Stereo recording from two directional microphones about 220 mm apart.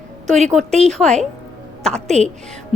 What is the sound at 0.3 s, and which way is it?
Speech, 30° right (ahead or behind).